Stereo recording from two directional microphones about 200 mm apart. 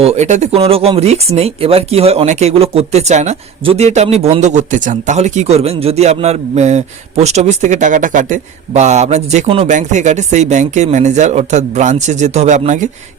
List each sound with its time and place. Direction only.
0.0 s speech: 35° right (ahead or behind)